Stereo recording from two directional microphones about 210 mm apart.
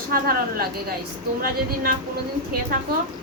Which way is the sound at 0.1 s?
45° right (ahead or behind).